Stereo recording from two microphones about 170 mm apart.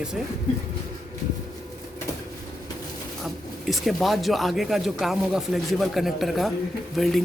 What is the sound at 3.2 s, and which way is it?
Speech, centre (ahead or behind).